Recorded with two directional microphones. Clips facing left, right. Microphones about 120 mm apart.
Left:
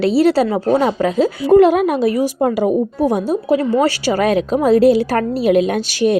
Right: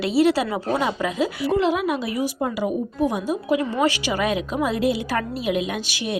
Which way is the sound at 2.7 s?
35° left (ahead or behind).